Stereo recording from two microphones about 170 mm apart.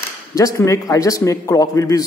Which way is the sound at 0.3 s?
20° left (ahead or behind).